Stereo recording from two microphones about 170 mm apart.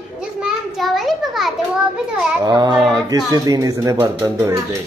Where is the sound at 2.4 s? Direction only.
25° right (ahead or behind).